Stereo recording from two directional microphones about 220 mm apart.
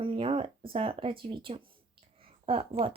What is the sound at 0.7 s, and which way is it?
Speech, 25° right (ahead or behind).